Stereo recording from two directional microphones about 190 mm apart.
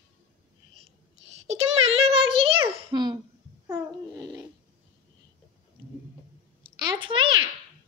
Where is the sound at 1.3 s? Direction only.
35° right (ahead or behind).